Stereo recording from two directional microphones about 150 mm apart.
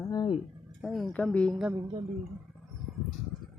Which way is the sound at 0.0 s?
25° left (ahead or behind).